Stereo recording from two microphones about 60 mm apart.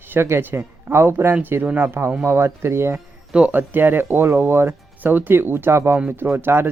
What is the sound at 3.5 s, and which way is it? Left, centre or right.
Speech, right.